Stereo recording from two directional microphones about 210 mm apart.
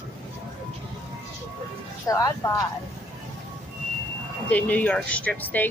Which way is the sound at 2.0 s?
15° left (ahead or behind).